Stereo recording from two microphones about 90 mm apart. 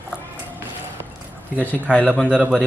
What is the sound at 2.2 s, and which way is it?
Speech, 15° right (ahead or behind).